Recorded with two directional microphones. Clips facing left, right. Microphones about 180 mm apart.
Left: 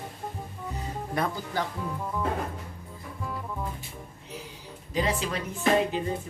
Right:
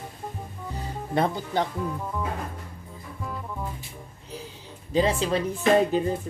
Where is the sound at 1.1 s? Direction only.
25° right (ahead or behind).